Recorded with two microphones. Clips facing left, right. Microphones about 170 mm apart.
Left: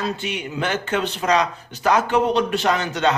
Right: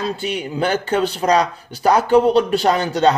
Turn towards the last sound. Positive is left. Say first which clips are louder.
# right 5 dB
turn(degrees=-35)  # may be behind; listen again after turning